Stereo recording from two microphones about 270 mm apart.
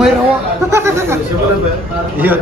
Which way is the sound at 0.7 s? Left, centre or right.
Centre.